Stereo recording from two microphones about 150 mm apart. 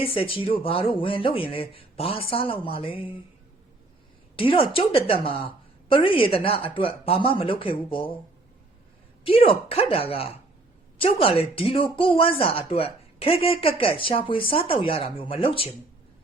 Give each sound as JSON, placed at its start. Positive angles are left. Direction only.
{"t": 0.0, "sound": "speech", "side_deg": 35}
{"t": 4.4, "sound": "speech", "side_deg": 35}
{"t": 9.2, "sound": "speech", "side_deg": 35}